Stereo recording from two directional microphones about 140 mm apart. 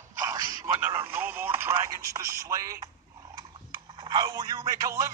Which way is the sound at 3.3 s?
30° right (ahead or behind).